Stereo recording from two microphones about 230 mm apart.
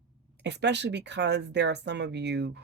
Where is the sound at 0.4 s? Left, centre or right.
Right.